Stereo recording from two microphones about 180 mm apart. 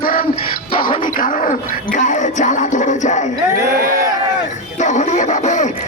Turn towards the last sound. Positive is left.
turn(degrees=40)  # may be behind; listen again after turning